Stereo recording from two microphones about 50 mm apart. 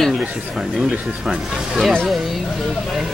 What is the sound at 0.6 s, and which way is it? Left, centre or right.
Speech, centre.